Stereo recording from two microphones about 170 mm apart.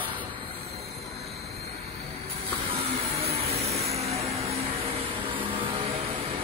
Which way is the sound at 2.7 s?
35° right (ahead or behind).